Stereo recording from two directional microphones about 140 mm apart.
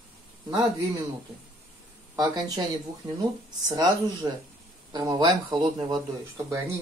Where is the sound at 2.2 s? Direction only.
30° right (ahead or behind).